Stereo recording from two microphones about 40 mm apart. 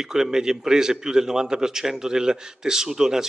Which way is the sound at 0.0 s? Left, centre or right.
Centre.